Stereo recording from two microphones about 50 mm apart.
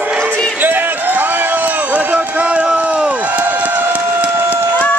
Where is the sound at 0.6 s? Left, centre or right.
Right.